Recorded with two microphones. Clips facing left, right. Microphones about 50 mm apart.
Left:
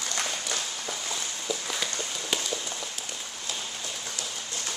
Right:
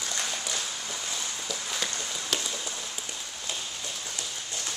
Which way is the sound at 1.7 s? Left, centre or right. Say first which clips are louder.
Left 1 dB; centre.